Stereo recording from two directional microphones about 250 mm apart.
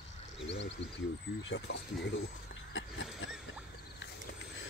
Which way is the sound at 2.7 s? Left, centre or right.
Left.